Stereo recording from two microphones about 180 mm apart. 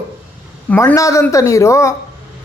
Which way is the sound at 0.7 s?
10° left (ahead or behind).